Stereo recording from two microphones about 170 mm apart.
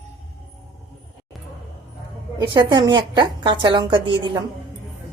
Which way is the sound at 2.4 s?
25° right (ahead or behind).